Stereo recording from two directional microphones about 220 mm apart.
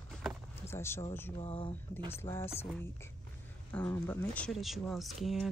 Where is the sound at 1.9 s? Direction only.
10° left (ahead or behind).